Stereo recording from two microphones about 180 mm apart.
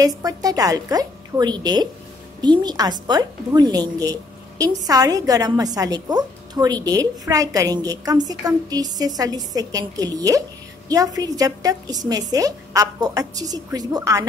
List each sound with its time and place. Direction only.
0.0 s a woman's voice: 20° right (ahead or behind)